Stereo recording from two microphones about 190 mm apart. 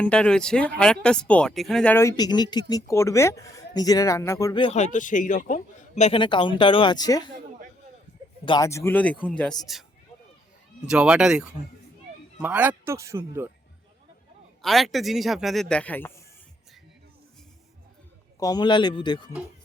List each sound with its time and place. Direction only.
0.0 s speech: 5° left (ahead or behind)
4.6 s a man's voice: 35° left (ahead or behind); by 7.3 s 20° left (ahead or behind)
8.4 s a man's voice: 20° left (ahead or behind); by 9.8 s centre (ahead or behind)
10.8 s a man's voice: 5° right (ahead or behind)
14.6 s a man's voice: centre (ahead or behind)
18.3 s a man's voice: 20° left (ahead or behind)